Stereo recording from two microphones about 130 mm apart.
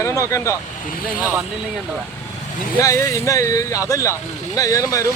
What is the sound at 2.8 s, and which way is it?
Speech, 25° left (ahead or behind).